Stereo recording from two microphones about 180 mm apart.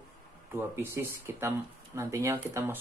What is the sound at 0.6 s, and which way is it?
Speech, 15° right (ahead or behind).